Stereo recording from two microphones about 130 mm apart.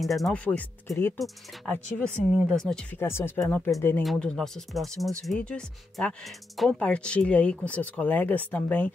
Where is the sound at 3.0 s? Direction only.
20° left (ahead or behind).